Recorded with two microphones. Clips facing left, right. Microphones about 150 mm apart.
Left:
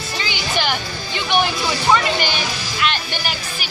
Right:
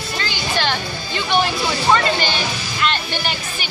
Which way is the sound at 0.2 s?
15° left (ahead or behind).